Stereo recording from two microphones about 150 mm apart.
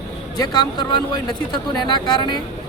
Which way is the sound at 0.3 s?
25° left (ahead or behind).